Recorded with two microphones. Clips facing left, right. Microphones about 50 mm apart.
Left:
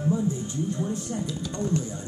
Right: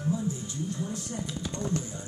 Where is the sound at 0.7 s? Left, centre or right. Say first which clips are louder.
Left 5 dB; left.